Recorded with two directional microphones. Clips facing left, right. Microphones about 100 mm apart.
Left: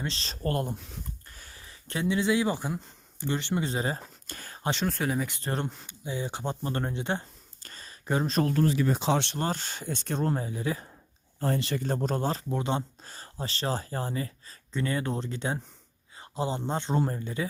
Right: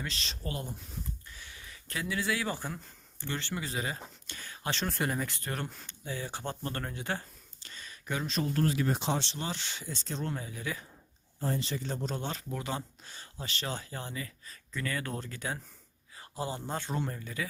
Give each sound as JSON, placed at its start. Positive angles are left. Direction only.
{"t": 0.0, "sound": "speech", "side_deg": 35}
{"t": 0.4, "sound": "speech", "side_deg": 55}
{"t": 1.3, "sound": "speech", "side_deg": 40}
{"t": 3.6, "sound": "speech", "side_deg": 30}
{"t": 4.3, "sound": "a sound", "side_deg": 45}
{"t": 4.9, "sound": "speech", "side_deg": 0}
{"t": 5.4, "sound": "speech", "side_deg": 30}
{"t": 5.8, "sound": "speech", "side_deg": 15}
{"t": 7.6, "sound": "a sound", "side_deg": 40}
{"t": 9.0, "sound": "speech", "side_deg": 65}
{"t": 10.2, "sound": "speech", "side_deg": 35}
{"t": 11.3, "sound": "speech", "side_deg": 70}
{"t": 13.1, "sound": "speech", "side_deg": 40}